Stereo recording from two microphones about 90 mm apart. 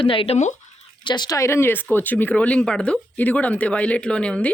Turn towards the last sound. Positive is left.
turn(degrees=10)  # may be behind; listen again after turning